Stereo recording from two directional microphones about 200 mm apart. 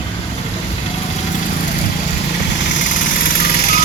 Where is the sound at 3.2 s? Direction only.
45° left (ahead or behind).